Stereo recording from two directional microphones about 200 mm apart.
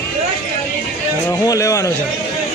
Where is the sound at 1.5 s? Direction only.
15° left (ahead or behind).